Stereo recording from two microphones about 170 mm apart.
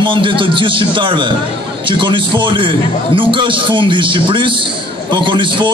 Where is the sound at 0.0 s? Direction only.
30° right (ahead or behind).